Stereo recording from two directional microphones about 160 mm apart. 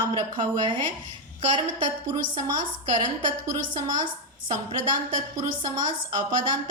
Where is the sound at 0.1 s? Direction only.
30° right (ahead or behind).